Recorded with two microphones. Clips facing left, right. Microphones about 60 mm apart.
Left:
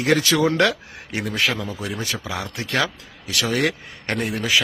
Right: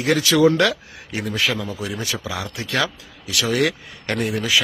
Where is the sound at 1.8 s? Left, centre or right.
Left.